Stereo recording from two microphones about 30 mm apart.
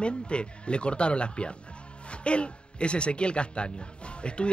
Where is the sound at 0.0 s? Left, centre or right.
Left.